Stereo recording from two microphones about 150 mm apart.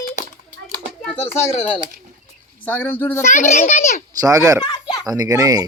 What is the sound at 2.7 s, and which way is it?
Speech, 15° left (ahead or behind).